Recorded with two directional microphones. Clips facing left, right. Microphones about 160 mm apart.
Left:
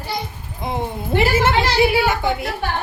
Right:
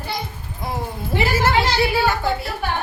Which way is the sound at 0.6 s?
20° left (ahead or behind).